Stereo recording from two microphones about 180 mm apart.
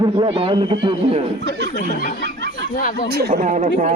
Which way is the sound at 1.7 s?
45° left (ahead or behind).